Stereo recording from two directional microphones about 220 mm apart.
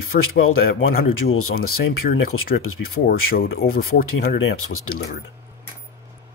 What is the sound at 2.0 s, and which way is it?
Speech, 40° left (ahead or behind).